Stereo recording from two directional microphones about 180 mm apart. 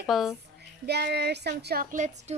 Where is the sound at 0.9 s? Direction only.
65° right (ahead or behind); by 2.3 s 45° right (ahead or behind).